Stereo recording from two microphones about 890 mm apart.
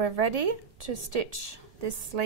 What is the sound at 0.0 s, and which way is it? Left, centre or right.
A woman's voice, right.